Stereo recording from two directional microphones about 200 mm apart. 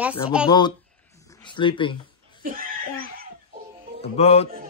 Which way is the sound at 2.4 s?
45° right (ahead or behind).